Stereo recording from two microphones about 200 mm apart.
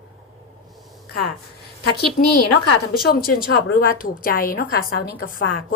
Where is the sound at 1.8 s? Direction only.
55° left (ahead or behind).